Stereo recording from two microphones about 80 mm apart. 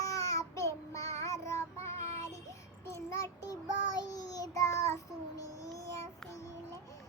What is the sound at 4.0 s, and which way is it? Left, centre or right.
Child singing, left.